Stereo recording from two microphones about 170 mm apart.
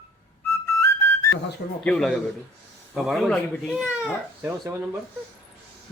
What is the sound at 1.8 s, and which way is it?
Speech, 5° left (ahead or behind).